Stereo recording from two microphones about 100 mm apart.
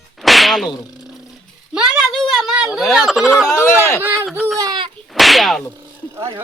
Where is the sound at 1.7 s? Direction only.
10° right (ahead or behind).